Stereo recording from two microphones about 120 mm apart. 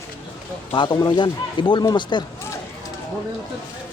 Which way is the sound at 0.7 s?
40° left (ahead or behind).